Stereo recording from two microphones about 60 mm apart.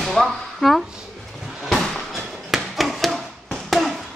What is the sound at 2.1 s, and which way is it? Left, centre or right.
Tap, centre.